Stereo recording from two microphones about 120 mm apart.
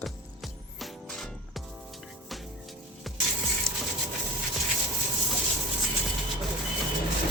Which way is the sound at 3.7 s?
25° right (ahead or behind).